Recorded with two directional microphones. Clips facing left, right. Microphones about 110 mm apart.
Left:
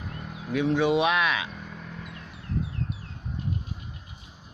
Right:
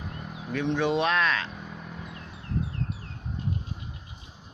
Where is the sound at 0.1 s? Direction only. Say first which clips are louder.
Even; 5° right (ahead or behind).